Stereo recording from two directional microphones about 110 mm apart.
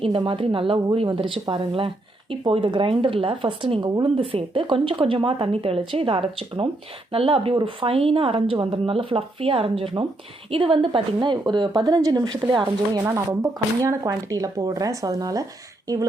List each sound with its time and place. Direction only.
0.1 s speech: 50° right (ahead or behind)
4.0 s a woman's voice: 55° right (ahead or behind); by 13.0 s 40° right (ahead or behind)
13.1 s a woman's voice: 25° right (ahead or behind)